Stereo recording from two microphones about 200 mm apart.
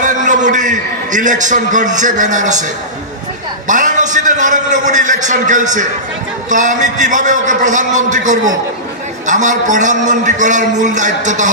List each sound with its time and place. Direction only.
0.0 s a sound: 40° right (ahead or behind)
2.0 s a man's voice: 40° right (ahead or behind)
3.6 s a man's voice: 40° right (ahead or behind)